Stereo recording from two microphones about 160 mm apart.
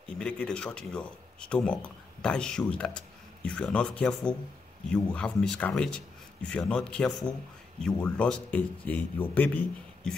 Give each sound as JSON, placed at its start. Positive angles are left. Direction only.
{"t": 0.2, "sound": "a man's voice", "side_deg": 5}